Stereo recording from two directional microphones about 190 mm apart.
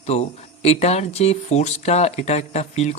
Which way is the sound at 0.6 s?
35° left (ahead or behind).